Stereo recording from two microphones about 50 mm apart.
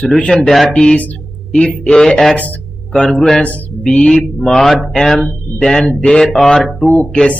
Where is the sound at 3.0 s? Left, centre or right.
Centre.